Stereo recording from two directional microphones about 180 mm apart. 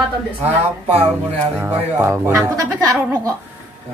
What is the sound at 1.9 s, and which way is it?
Speech, 15° right (ahead or behind).